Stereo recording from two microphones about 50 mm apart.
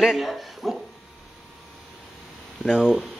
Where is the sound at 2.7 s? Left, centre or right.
Centre.